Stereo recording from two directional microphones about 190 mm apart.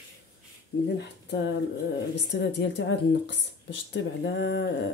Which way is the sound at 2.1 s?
70° left (ahead or behind).